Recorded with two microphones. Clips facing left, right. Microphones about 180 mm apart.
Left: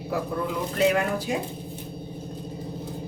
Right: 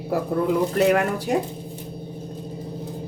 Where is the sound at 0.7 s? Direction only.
65° right (ahead or behind).